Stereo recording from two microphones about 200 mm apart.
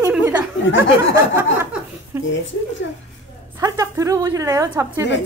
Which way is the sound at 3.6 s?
15° right (ahead or behind).